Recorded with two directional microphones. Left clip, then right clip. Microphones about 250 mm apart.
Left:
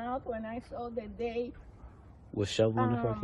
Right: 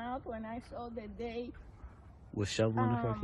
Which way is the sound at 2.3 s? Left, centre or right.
Right.